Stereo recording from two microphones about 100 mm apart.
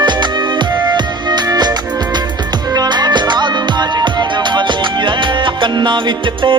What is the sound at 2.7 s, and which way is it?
Music, 45° right (ahead or behind).